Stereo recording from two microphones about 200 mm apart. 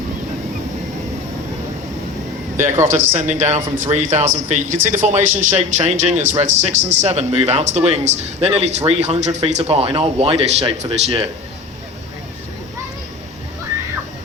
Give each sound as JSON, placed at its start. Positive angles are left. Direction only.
{"t": 2.6, "sound": "a man's voice", "side_deg": -10}
{"t": 3.2, "sound": "speech", "side_deg": -35}